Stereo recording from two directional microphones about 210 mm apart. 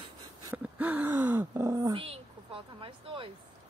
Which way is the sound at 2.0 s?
25° right (ahead or behind).